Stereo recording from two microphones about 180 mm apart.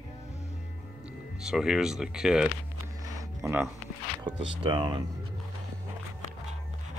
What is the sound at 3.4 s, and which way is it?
Speech, 15° right (ahead or behind).